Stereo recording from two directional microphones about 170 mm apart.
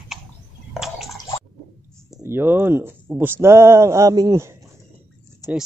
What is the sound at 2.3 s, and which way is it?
Speech, 10° right (ahead or behind).